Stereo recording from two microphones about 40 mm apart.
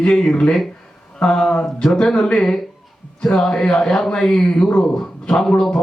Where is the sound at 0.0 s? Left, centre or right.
Centre.